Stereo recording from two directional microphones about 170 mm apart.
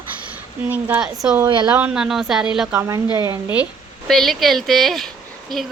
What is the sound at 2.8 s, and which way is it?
Speech, 20° right (ahead or behind).